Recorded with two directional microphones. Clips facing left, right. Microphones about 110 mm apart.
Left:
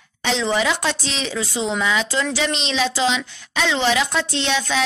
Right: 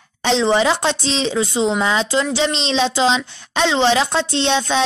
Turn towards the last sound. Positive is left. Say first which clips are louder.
# right 4 dB
turn(degrees=-30)  # may be behind; listen again after turning